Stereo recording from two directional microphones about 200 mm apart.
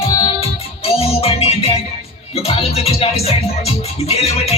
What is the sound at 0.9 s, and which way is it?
Music, 30° left (ahead or behind).